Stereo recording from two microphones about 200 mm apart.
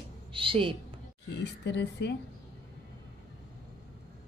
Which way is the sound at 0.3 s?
25° right (ahead or behind).